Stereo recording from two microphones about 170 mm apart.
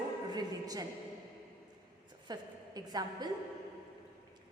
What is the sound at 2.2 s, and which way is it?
A woman's voice, 25° right (ahead or behind).